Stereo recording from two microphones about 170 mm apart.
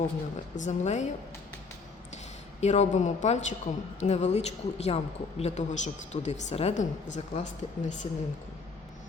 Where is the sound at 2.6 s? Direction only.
45° left (ahead or behind).